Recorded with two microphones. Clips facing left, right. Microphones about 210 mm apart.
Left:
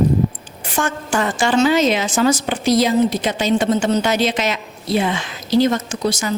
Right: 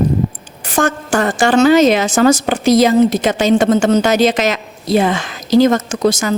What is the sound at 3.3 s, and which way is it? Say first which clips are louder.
Speech: right 5 dB; 90° right.